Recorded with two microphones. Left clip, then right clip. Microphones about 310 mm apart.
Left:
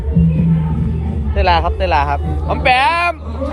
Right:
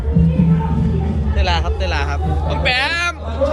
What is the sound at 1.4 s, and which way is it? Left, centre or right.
Speech, centre.